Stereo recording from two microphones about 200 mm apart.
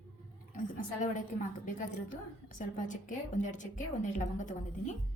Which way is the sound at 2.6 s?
40° left (ahead or behind).